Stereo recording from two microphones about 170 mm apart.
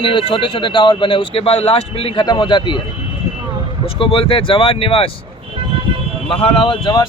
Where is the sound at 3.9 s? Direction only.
30° left (ahead or behind).